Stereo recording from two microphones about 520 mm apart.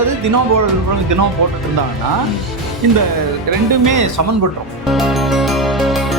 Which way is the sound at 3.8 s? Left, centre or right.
Right.